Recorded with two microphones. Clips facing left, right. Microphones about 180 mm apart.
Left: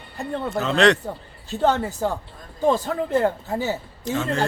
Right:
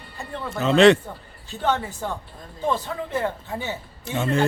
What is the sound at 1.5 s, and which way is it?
A man's voice, 40° left (ahead or behind).